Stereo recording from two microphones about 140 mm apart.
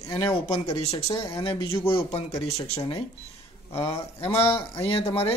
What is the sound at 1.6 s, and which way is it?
Speech, 15° left (ahead or behind).